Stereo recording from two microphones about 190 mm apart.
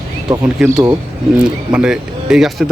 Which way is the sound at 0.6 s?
5° right (ahead or behind).